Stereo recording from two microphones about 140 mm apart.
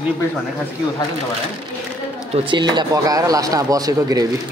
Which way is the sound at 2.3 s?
35° right (ahead or behind).